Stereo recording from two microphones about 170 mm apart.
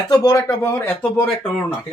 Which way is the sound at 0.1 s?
20° left (ahead or behind).